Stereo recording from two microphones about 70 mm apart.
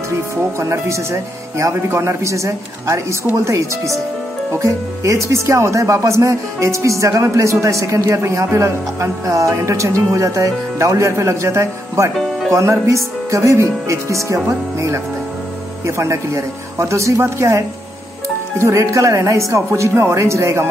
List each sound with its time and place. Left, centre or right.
0.4 s speech: right
16.0 s speech: right